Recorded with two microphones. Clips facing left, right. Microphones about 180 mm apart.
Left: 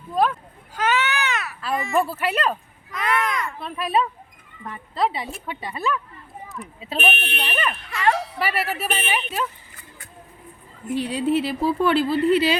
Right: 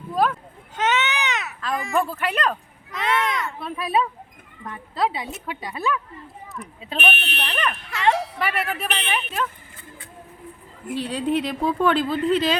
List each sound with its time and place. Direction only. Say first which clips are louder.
0.1 s a sound: left 1 dB; centre (ahead or behind)
0.8 s baby cry: even; 20° right (ahead or behind)
1.6 s a woman's voice: left 1 dB; centre (ahead or behind)
10.9 s speech: left 2 dB; 10° left (ahead or behind)